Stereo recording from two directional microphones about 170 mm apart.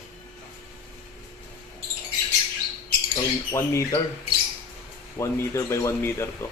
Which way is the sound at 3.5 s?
15° left (ahead or behind).